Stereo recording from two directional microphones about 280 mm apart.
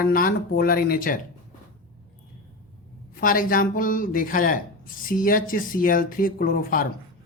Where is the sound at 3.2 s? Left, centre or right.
Left.